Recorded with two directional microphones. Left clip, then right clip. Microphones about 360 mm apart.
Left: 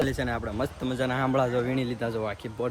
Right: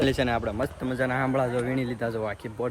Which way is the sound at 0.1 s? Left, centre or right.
Centre.